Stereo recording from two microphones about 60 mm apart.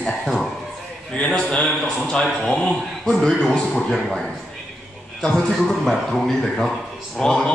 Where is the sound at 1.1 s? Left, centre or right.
Centre.